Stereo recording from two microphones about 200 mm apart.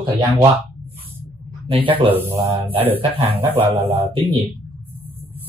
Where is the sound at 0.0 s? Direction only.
15° right (ahead or behind).